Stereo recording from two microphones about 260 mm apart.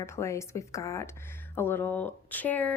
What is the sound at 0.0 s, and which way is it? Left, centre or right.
Speech, centre.